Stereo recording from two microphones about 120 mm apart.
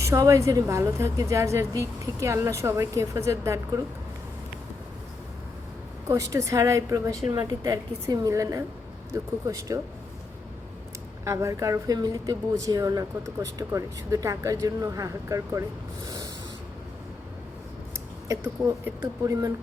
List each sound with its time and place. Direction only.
0.0 s speech: 25° right (ahead or behind)
6.1 s speech: 25° right (ahead or behind)
11.3 s speech: 25° right (ahead or behind)
16.0 s a sound: 30° right (ahead or behind)
18.3 s speech: 30° right (ahead or behind)